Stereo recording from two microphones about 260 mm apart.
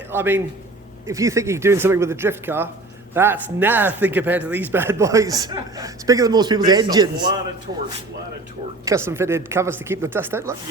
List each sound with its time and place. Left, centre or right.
0.1 s speech: centre
8.8 s speech: centre